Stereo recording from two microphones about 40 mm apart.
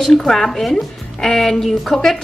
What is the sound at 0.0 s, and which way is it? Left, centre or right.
A woman's voice, centre.